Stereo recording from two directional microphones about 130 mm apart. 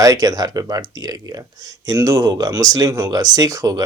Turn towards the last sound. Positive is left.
turn(degrees=-25)  # may be behind; listen again after turning